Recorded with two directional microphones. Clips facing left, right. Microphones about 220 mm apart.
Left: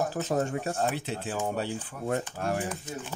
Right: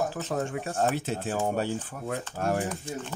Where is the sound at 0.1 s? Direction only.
40° left (ahead or behind).